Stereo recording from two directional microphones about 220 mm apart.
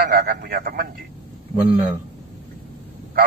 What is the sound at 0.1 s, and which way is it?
Speech, 40° right (ahead or behind).